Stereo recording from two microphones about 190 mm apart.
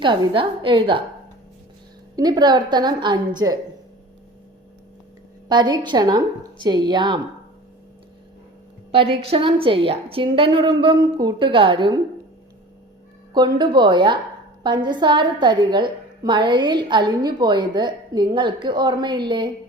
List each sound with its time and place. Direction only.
0.0 s a woman's voice: 25° right (ahead or behind)
2.1 s a woman's voice: 20° right (ahead or behind)
5.5 s a woman's voice: 25° right (ahead or behind)
8.9 s a woman's voice: 30° right (ahead or behind)
13.3 s a woman's voice: 25° right (ahead or behind)